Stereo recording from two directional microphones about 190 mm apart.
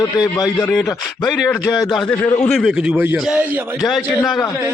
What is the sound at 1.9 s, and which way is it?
A man's voice, 5° left (ahead or behind).